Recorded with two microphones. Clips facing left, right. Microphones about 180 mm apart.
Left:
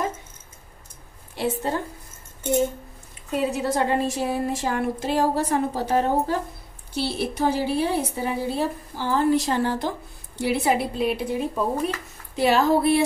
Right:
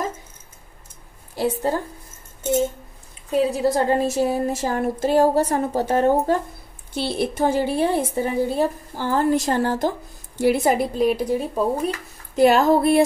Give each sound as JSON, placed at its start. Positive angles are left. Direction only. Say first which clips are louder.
{"t": 1.3, "sound": "a woman's voice", "louder": "right 3 dB", "side_deg": -40}
{"t": 3.3, "sound": "a woman's voice", "louder": "right 5 dB", "side_deg": -35}